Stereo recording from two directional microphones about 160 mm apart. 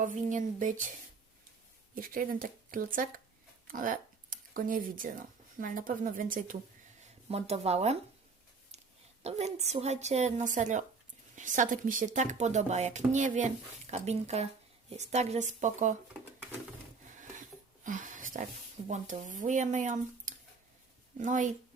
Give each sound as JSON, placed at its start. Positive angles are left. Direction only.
{"t": 0.0, "sound": "speech", "side_deg": -55}
{"t": 2.0, "sound": "speech", "side_deg": -60}
{"t": 7.3, "sound": "speech", "side_deg": -40}
{"t": 9.2, "sound": "speech", "side_deg": -45}
{"t": 17.8, "sound": "a sound", "side_deg": -55}
{"t": 18.9, "sound": "speech", "side_deg": -50}